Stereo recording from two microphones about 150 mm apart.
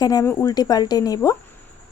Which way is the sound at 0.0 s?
25° left (ahead or behind).